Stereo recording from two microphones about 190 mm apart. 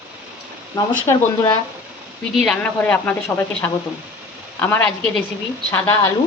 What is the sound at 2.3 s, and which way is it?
A woman's voice, 5° left (ahead or behind).